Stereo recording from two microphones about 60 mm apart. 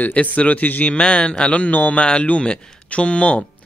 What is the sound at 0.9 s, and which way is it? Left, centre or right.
A man's voice, centre.